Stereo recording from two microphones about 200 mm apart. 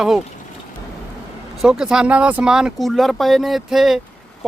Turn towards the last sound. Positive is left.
turn(degrees=0)  # may be behind; listen again after turning